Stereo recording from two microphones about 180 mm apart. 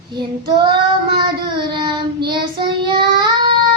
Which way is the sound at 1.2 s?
25° right (ahead or behind).